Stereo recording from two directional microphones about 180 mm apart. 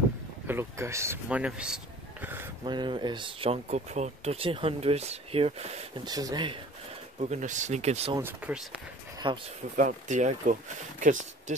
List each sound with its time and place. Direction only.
0.5 s speech: 15° right (ahead or behind)
2.2 s a sound: 10° right (ahead or behind)
2.6 s speech: 25° right (ahead or behind)
6.0 s speech: 20° right (ahead or behind)
7.2 s speech: 40° right (ahead or behind)
8.2 s speech: 10° right (ahead or behind)
9.2 s speech: 25° right (ahead or behind)
9.8 s speech: 45° right (ahead or behind)